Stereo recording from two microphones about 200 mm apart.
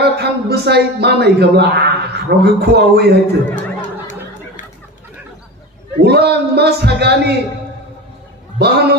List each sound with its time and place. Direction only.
0.0 s speech: 55° right (ahead or behind)
3.5 s chatter: 40° left (ahead or behind)
6.0 s a man's voice: 55° right (ahead or behind)
8.5 s a man's voice: 55° right (ahead or behind)